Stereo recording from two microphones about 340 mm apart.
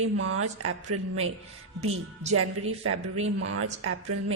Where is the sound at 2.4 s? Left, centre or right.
Right.